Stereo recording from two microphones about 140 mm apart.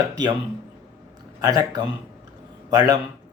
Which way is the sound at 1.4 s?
30° right (ahead or behind).